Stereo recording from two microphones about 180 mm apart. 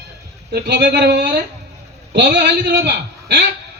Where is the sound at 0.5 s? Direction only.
65° right (ahead or behind).